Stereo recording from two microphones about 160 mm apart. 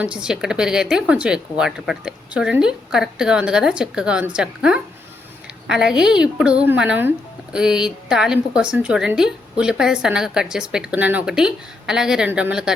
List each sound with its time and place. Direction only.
0.0 s a woman's voice: 5° right (ahead or behind)